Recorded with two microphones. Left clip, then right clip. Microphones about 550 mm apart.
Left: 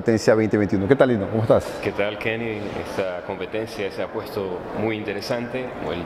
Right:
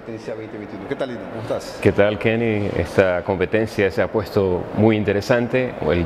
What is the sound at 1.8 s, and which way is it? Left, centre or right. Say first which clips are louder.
Speech: right 7 dB; right.